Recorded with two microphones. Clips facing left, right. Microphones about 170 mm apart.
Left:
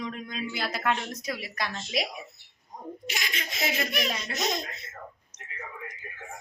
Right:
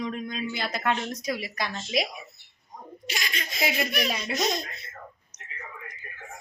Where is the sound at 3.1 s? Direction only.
20° left (ahead or behind).